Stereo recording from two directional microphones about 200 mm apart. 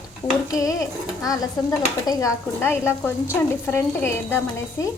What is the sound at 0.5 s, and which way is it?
A woman's voice, 15° left (ahead or behind).